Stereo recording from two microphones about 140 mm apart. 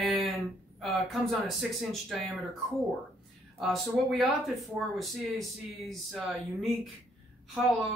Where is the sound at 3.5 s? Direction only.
Centre (ahead or behind).